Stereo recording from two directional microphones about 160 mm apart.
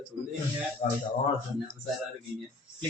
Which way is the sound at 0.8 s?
50° left (ahead or behind).